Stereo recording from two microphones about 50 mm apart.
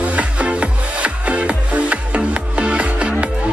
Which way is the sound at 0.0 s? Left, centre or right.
Right.